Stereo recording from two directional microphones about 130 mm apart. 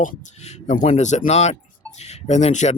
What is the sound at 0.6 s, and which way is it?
Speech, 65° left (ahead or behind).